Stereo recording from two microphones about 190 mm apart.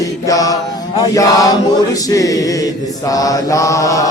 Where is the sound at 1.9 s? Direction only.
20° left (ahead or behind).